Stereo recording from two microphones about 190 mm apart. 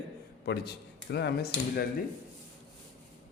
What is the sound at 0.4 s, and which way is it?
A man's voice, 60° left (ahead or behind).